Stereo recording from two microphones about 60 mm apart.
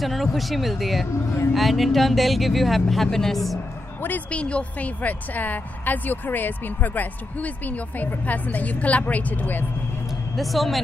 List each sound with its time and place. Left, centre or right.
0.0 s speech: centre
4.3 s a woman's voice: centre
10.3 s speech: centre